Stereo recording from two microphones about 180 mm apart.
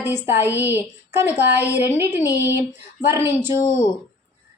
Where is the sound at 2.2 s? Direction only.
20° left (ahead or behind).